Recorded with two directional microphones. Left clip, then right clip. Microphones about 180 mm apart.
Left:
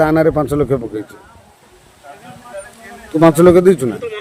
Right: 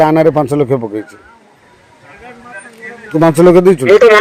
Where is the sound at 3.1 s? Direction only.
20° right (ahead or behind).